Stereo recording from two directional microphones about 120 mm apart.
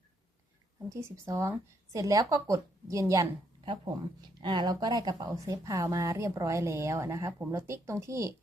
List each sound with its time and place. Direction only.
0.9 s speech: 25° right (ahead or behind)
3.6 s speech: 40° right (ahead or behind); by 8.3 s 25° right (ahead or behind)